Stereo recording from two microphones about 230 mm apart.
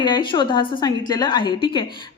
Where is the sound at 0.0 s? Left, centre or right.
Centre.